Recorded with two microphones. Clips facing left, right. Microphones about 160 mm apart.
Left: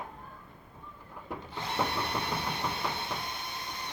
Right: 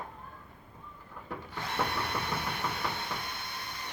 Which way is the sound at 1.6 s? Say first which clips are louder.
Left 1 dB; 20° left (ahead or behind).